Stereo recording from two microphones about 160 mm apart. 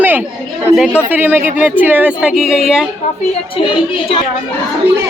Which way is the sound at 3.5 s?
35° left (ahead or behind).